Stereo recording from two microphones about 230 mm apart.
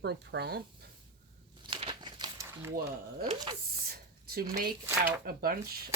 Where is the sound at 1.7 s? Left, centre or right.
Centre.